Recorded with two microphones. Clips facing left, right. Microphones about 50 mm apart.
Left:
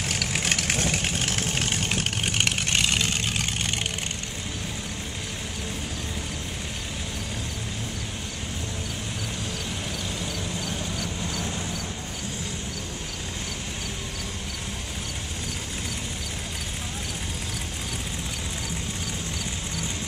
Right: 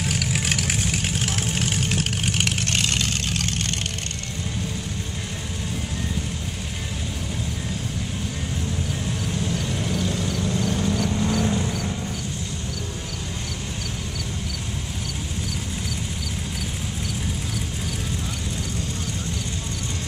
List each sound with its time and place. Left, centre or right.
0.0 s vehicle: centre
10.2 s vehicle: right